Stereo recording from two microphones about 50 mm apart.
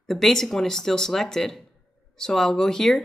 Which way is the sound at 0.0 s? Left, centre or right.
Centre.